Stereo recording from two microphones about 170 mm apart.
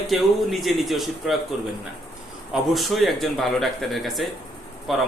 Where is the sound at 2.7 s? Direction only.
Centre (ahead or behind).